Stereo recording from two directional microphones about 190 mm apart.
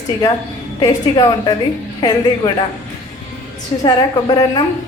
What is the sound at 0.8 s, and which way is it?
Speech, 20° left (ahead or behind).